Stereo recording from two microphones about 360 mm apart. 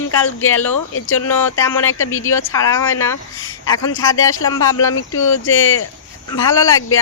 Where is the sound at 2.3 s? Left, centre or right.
Centre.